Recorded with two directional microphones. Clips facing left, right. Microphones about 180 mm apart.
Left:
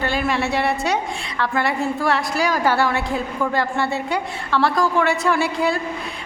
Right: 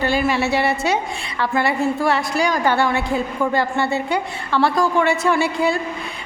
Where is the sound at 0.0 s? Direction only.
Centre (ahead or behind).